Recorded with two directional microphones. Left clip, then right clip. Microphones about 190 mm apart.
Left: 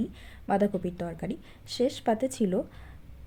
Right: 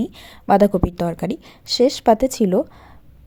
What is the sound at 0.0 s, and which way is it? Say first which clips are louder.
A woman's voice: right 9 dB; 40° right (ahead or behind).